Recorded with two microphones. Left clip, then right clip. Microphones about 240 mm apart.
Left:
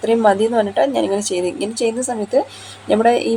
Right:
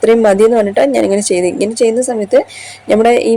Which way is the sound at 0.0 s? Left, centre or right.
Right.